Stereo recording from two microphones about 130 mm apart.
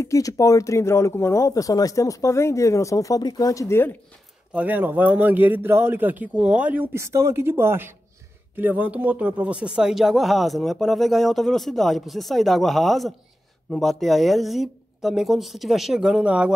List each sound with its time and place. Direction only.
0.0 s speech: 25° left (ahead or behind)
4.6 s speech: 15° right (ahead or behind)